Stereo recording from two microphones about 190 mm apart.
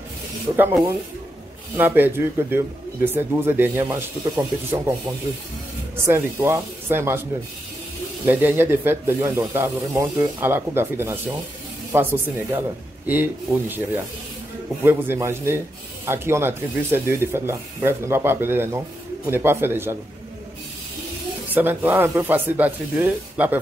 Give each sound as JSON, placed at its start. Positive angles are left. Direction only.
{"t": 0.6, "sound": "speech", "side_deg": -10}
{"t": 6.0, "sound": "speech", "side_deg": -15}
{"t": 8.3, "sound": "speech", "side_deg": -10}
{"t": 21.5, "sound": "speech", "side_deg": -10}